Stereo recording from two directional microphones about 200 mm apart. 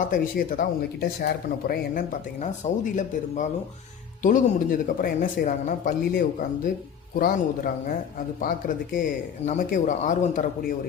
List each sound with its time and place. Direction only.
0.0 s speech: 45° left (ahead or behind)